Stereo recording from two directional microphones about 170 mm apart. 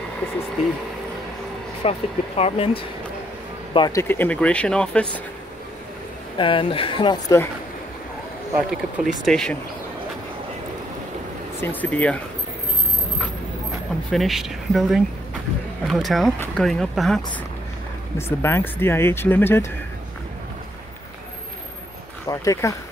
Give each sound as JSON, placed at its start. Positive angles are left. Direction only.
{"t": 1.8, "sound": "speech", "side_deg": 35}
{"t": 4.0, "sound": "speech", "side_deg": 10}
{"t": 6.3, "sound": "speech", "side_deg": 30}
{"t": 8.6, "sound": "speech", "side_deg": 0}
{"t": 11.6, "sound": "speech", "side_deg": 10}
{"t": 14.1, "sound": "speech", "side_deg": 0}
{"t": 18.1, "sound": "speech", "side_deg": 15}
{"t": 22.3, "sound": "speech", "side_deg": 20}